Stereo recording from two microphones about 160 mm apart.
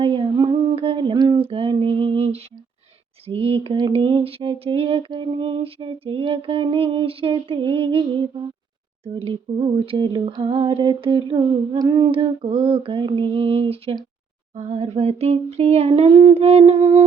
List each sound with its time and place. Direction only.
0.0 s a sound: 30° right (ahead or behind)
3.2 s speech: 35° right (ahead or behind)
9.5 s speech: 30° right (ahead or behind)